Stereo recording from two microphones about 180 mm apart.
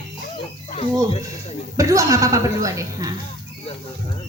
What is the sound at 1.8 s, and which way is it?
A woman's voice, 15° right (ahead or behind).